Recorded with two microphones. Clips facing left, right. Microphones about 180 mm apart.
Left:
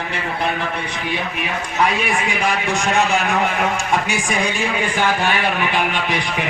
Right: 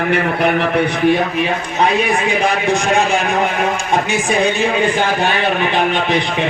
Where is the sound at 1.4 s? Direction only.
30° right (ahead or behind).